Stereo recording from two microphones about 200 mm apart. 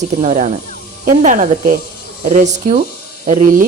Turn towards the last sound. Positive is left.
turn(degrees=-40)  # may be behind; listen again after turning